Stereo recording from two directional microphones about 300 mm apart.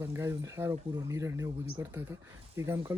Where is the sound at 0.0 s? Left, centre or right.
Centre.